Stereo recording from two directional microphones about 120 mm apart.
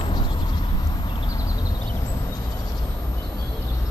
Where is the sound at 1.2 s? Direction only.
30° left (ahead or behind).